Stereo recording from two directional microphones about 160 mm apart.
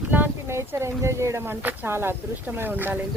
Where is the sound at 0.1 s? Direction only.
15° right (ahead or behind).